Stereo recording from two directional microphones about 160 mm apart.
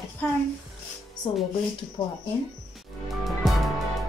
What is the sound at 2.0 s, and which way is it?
Speech, 20° left (ahead or behind).